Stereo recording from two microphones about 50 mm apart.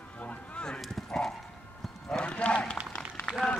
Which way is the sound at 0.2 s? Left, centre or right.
Left.